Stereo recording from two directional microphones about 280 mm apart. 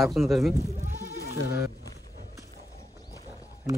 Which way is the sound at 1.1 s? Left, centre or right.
Left.